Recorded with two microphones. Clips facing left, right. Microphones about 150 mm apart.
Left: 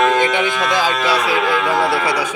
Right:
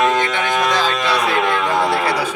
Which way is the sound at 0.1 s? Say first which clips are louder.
Left 2 dB; 15° left (ahead or behind).